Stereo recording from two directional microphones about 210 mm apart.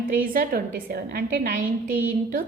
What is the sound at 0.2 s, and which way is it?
A woman's voice, 45° right (ahead or behind).